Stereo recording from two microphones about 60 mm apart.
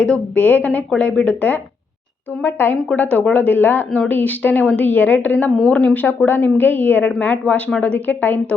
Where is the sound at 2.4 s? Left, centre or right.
Left.